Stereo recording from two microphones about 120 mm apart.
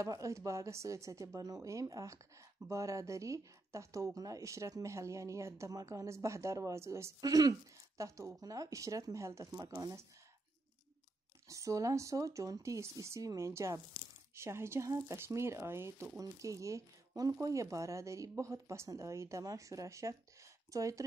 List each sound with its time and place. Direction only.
0.0 s speech: 25° right (ahead or behind)
11.4 s speech: 25° right (ahead or behind)